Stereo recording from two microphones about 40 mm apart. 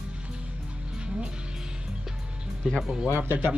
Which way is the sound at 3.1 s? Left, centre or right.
Right.